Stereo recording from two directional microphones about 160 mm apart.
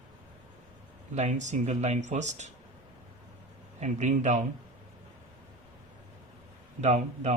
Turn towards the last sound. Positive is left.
turn(degrees=-45)  # may be behind; listen again after turning